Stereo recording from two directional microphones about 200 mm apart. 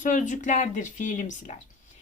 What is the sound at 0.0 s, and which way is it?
A woman's voice, 40° left (ahead or behind).